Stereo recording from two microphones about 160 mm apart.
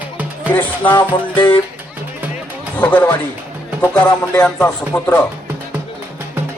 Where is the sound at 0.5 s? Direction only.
10° left (ahead or behind).